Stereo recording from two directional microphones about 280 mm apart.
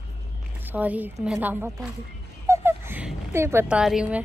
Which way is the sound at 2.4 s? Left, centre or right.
Centre.